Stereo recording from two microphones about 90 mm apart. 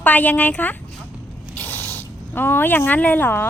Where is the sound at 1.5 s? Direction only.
20° left (ahead or behind).